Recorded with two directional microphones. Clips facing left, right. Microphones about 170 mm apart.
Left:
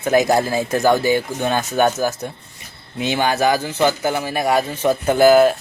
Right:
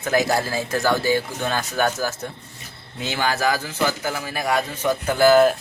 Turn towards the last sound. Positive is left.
turn(degrees=20)  # may be behind; listen again after turning